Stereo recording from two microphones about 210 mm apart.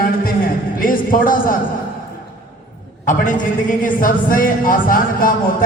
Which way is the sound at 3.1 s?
40° left (ahead or behind).